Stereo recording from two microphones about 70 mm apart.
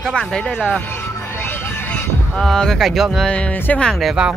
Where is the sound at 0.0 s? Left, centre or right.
Centre.